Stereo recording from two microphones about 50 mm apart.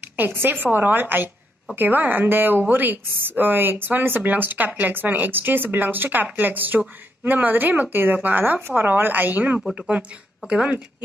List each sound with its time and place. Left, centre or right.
0.1 s speech: right